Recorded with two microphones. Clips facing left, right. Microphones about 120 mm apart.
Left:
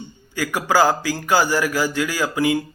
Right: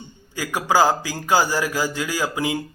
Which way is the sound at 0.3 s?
20° right (ahead or behind).